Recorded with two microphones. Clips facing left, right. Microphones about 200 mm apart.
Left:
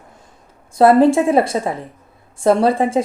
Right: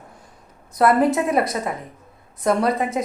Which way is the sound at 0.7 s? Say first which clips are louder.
Left 6 dB; 30° left (ahead or behind).